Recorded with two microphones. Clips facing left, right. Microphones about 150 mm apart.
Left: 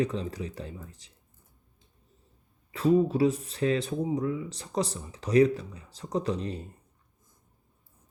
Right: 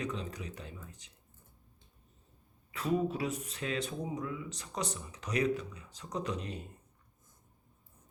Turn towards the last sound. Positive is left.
turn(degrees=30)  # may be behind; listen again after turning